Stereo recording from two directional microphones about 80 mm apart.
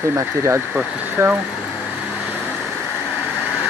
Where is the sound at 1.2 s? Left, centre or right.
Right.